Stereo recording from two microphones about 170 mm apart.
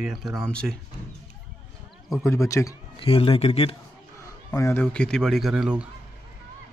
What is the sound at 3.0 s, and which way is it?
Speech, 35° left (ahead or behind).